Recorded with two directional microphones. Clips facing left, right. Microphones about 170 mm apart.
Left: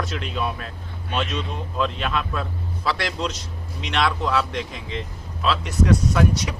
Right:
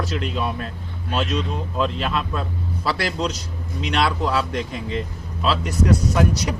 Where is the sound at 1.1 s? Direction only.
5° right (ahead or behind).